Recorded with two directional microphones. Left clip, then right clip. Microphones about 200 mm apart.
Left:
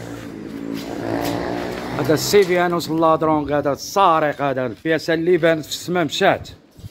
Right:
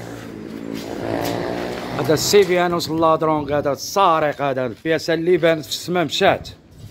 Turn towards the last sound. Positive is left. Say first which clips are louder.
# even
turn(degrees=-5)  # may be behind; listen again after turning